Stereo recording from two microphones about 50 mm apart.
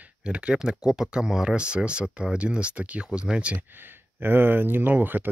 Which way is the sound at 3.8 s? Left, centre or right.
Right.